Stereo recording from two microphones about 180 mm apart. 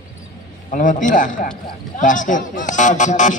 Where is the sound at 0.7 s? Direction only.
45° left (ahead or behind).